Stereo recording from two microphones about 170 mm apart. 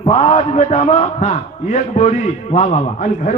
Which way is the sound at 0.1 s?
45° left (ahead or behind).